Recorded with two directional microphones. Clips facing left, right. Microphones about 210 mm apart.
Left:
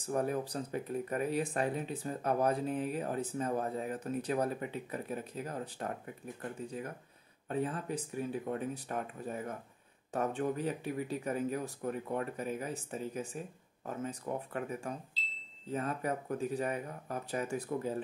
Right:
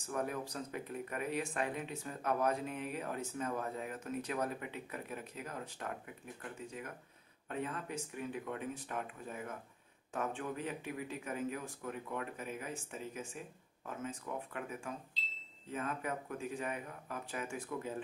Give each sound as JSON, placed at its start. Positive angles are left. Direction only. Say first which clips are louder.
{"t": 0.0, "sound": "speech", "louder": "left 5 dB", "side_deg": 35}
{"t": 7.4, "sound": "speech", "louder": "left 5 dB", "side_deg": 35}